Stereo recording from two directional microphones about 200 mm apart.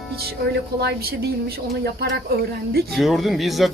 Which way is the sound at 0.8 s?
55° right (ahead or behind).